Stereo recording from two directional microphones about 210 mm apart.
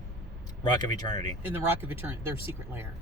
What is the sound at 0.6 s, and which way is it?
Speech, 20° left (ahead or behind).